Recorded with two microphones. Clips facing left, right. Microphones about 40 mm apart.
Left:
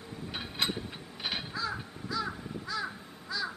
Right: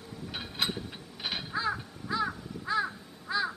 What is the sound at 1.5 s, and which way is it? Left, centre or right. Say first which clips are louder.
Crow: right 4 dB; right.